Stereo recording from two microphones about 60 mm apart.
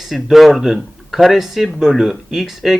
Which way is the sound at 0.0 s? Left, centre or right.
Centre.